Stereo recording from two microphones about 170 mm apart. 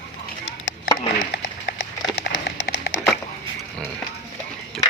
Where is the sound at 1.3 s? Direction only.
90° left.